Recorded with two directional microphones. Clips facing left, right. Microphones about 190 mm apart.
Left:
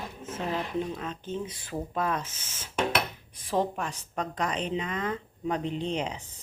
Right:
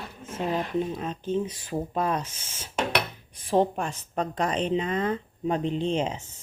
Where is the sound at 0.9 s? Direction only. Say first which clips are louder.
Right 6 dB; 20° right (ahead or behind).